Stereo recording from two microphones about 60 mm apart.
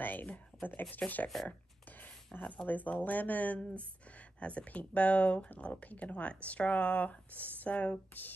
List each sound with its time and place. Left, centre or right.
0.0 s speech: left
2.5 s speech: left